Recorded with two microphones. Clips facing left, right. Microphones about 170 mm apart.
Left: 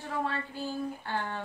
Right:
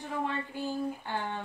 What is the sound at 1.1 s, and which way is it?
Speech, 15° right (ahead or behind).